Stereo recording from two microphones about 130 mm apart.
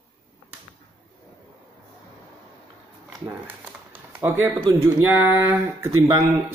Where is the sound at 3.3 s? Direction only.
15° right (ahead or behind).